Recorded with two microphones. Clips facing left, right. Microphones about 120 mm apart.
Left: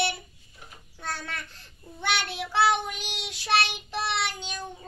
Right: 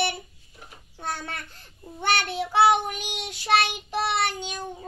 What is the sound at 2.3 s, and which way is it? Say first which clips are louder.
Child singing: right 5 dB; 20° right (ahead or behind).